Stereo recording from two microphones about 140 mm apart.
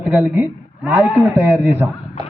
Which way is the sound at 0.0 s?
10° right (ahead or behind).